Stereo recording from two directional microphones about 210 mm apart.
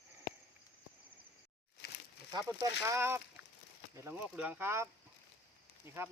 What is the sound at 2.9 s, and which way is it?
Speech, 10° right (ahead or behind).